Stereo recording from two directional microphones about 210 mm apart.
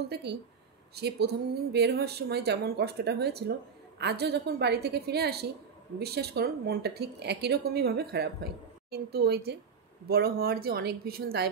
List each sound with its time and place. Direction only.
0.1 s speech: 50° right (ahead or behind)